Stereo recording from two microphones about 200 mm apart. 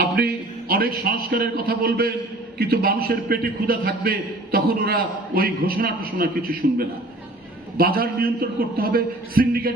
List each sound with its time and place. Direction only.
0.7 s a man's voice: 50° right (ahead or behind)